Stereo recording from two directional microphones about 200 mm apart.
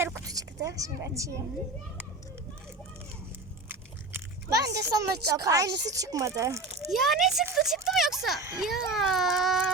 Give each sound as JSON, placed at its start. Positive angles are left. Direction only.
{"t": 0.0, "sound": "a sound", "side_deg": -15}
{"t": 3.7, "sound": "biting", "side_deg": -15}
{"t": 5.4, "sound": "speech", "side_deg": -15}
{"t": 6.9, "sound": "a child's voice", "side_deg": 0}